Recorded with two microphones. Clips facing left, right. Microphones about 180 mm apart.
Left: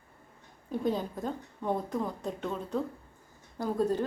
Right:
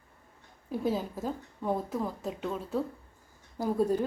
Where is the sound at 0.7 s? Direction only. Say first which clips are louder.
Even; 5° right (ahead or behind).